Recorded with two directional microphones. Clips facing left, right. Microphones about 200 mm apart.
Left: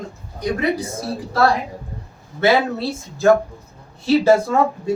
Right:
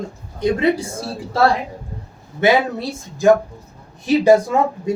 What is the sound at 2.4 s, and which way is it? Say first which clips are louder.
Speech: right 1 dB; 15° right (ahead or behind).